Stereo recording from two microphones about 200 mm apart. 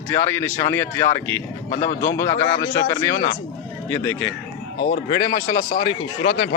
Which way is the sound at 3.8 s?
10° left (ahead or behind).